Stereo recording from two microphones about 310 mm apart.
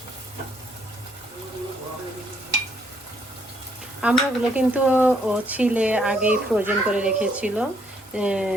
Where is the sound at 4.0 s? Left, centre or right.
Centre.